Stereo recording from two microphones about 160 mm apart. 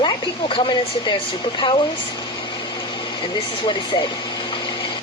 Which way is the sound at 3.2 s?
30° left (ahead or behind).